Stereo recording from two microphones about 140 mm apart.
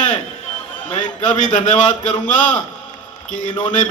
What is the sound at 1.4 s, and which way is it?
Speech, 60° left (ahead or behind).